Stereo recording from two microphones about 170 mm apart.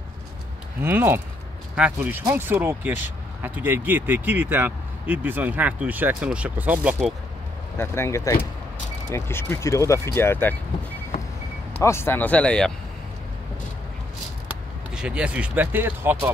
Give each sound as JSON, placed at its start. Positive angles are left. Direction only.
{"t": 0.8, "sound": "speech", "side_deg": -10}
{"t": 7.7, "sound": "speech", "side_deg": 15}
{"t": 11.8, "sound": "speech", "side_deg": 15}
{"t": 15.0, "sound": "speech", "side_deg": -5}